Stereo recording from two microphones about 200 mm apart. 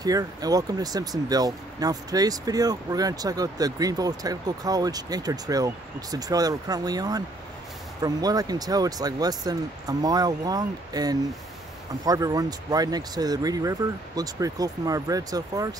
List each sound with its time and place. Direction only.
0.0 s speech: 20° right (ahead or behind)